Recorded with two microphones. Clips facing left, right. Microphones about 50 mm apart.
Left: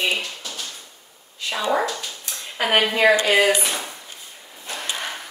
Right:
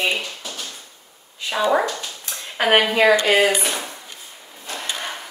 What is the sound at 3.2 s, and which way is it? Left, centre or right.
Speech, right.